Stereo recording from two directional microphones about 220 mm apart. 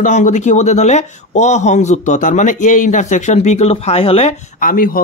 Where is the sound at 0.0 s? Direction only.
35° left (ahead or behind).